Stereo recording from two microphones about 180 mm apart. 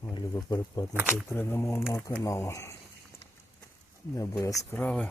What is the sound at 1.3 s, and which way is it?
Speech, 15° left (ahead or behind).